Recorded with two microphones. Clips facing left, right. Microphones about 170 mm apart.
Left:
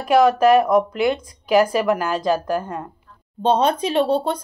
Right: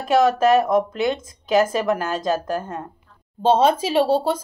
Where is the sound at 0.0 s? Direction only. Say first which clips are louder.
Left 2 dB; 25° right (ahead or behind).